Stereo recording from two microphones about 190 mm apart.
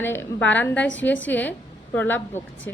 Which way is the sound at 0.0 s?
10° left (ahead or behind).